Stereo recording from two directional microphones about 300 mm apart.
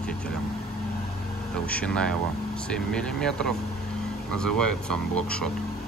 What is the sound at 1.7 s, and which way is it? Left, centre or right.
Speech, centre.